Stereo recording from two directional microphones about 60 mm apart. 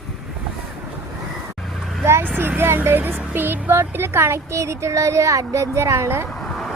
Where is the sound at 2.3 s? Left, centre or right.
Right.